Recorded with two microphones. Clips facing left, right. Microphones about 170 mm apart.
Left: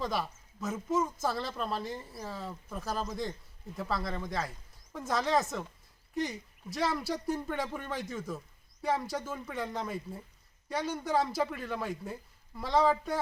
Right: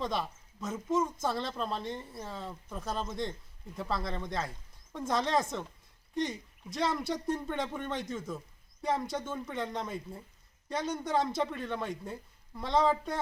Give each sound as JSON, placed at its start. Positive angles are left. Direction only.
{"t": 0.0, "sound": "speech", "side_deg": 5}